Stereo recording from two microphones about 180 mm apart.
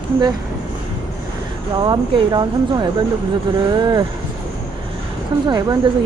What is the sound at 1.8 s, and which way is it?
Speech, 25° right (ahead or behind).